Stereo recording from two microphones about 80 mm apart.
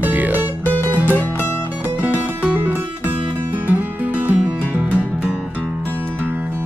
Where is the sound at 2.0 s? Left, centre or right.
Centre.